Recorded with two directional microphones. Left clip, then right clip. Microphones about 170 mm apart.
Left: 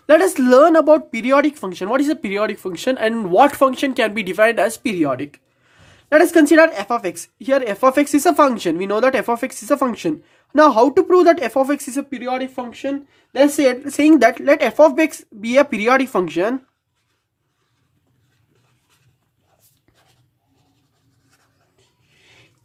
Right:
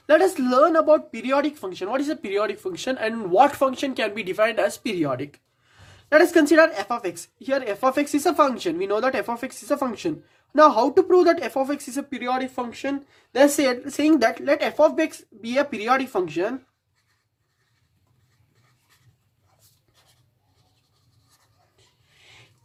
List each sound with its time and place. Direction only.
0.1 s speech: 40° left (ahead or behind)
12.1 s a woman's voice: 15° left (ahead or behind)
13.7 s speech: 30° left (ahead or behind)